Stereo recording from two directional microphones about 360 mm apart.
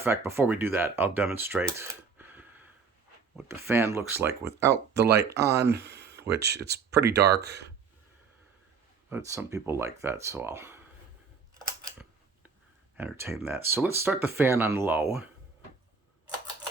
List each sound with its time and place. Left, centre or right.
0.0 s speech: centre
4.9 s speech: right
5.5 s speech: centre
6.3 s speech: right
9.0 s speech: centre
13.0 s speech: centre